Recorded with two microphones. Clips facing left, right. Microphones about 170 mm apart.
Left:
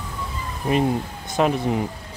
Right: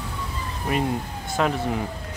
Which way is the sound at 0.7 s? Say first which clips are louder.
Left 4 dB; 25° left (ahead or behind).